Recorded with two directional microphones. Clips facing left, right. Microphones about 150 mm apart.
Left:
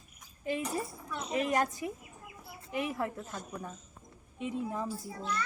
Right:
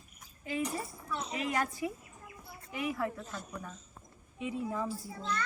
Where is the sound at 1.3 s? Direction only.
40° left (ahead or behind).